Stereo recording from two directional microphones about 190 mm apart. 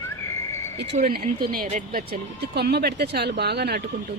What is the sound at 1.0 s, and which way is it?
Speech, 50° right (ahead or behind).